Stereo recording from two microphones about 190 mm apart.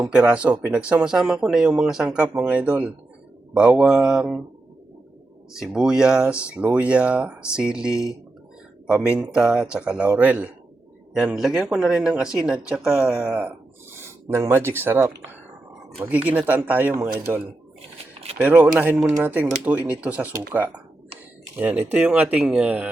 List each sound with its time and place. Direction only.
0.1 s speech: 5° right (ahead or behind)
5.5 s speech: 5° right (ahead or behind)
17.9 s a sound: 35° right (ahead or behind)
18.3 s speech: 5° right (ahead or behind)